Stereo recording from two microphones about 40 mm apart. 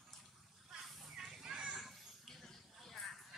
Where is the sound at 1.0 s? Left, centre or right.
Centre.